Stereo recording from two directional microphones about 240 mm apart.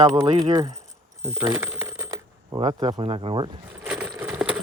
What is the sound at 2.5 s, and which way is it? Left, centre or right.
Speech, centre.